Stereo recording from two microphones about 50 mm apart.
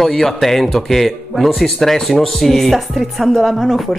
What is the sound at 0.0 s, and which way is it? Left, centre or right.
Speech, centre.